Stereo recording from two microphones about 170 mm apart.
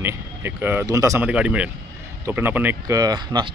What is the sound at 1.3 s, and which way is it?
Speech, 5° right (ahead or behind).